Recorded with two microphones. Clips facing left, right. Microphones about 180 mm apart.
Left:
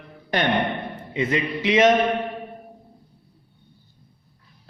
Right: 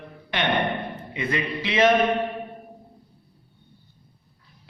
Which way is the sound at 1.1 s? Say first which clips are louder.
Left 4 dB; 20° left (ahead or behind).